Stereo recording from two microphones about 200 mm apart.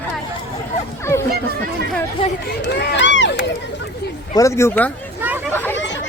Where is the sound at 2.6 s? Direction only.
60° left (ahead or behind).